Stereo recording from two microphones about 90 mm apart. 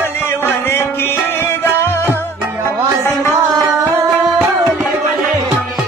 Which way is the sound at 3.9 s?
25° right (ahead or behind).